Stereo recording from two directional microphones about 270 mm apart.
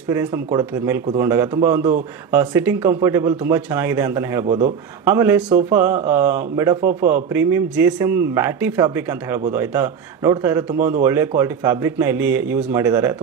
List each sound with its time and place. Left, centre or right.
0.1 s speech: centre
4.5 s speech: right
5.0 s speech: centre